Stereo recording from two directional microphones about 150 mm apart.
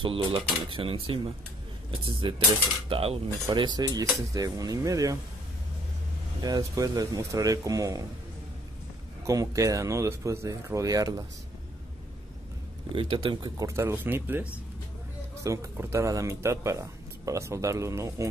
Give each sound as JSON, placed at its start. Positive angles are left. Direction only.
{"t": 0.0, "sound": "speech", "side_deg": -35}
{"t": 6.4, "sound": "speech", "side_deg": -25}
{"t": 9.2, "sound": "speech", "side_deg": -20}
{"t": 12.9, "sound": "speech", "side_deg": -35}